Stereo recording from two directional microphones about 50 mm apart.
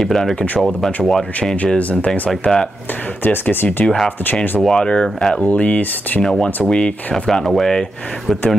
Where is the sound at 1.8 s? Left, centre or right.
Left.